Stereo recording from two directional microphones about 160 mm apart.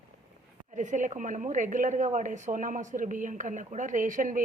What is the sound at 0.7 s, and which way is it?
A woman's voice, 50° right (ahead or behind).